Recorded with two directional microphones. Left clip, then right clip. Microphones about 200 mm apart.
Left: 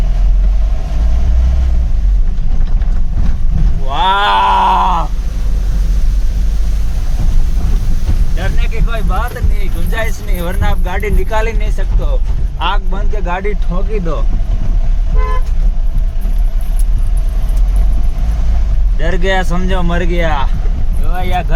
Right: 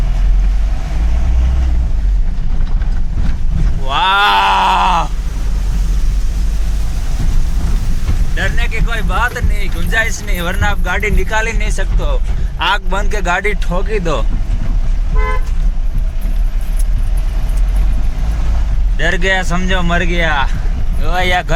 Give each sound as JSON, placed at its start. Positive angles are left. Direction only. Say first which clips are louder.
{"t": 3.8, "sound": "a sound", "louder": "right 1 dB", "side_deg": 10}
{"t": 8.4, "sound": "a sound", "louder": "right 6 dB", "side_deg": 0}
{"t": 12.5, "sound": "speech", "louder": "right 3 dB", "side_deg": -10}
{"t": 13.7, "sound": "speech", "louder": "right 4 dB", "side_deg": -15}
{"t": 18.9, "sound": "speech", "louder": "right 1 dB", "side_deg": 5}
{"t": 21.1, "sound": "speech", "louder": "right 5 dB", "side_deg": -5}